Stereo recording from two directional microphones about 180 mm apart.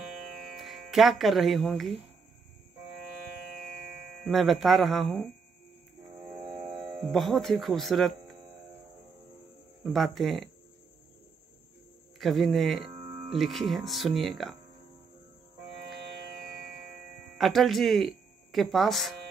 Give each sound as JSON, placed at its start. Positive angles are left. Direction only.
{"t": 0.6, "sound": "speech", "side_deg": 0}
{"t": 4.2, "sound": "speech", "side_deg": 0}
{"t": 6.8, "sound": "speech", "side_deg": 0}
{"t": 9.9, "sound": "speech", "side_deg": 0}
{"t": 12.2, "sound": "speech", "side_deg": 0}
{"t": 12.9, "sound": "music", "side_deg": -35}
{"t": 13.4, "sound": "speech", "side_deg": 0}
{"t": 17.4, "sound": "speech", "side_deg": 0}